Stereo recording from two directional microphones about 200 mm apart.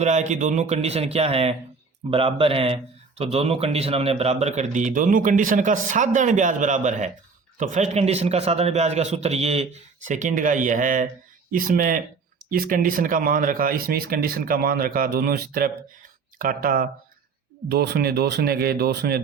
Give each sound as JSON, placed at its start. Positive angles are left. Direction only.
{"t": 0.0, "sound": "speech", "side_deg": -35}